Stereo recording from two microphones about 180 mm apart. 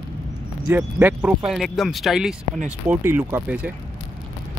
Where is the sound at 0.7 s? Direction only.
10° right (ahead or behind).